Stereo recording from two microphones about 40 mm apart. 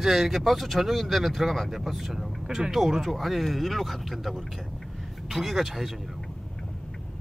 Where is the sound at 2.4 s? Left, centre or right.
Centre.